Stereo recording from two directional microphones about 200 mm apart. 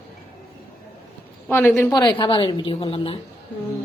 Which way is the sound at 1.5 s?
10° left (ahead or behind).